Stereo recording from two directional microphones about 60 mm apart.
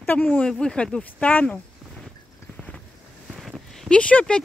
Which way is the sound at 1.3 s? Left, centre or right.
Left.